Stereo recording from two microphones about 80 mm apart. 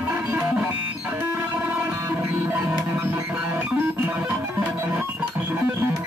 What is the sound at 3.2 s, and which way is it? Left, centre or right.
Music, centre.